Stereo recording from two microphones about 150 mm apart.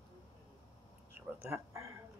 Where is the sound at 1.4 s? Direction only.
20° right (ahead or behind).